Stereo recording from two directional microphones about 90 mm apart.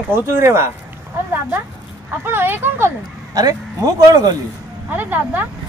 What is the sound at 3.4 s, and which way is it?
Speech, 45° right (ahead or behind).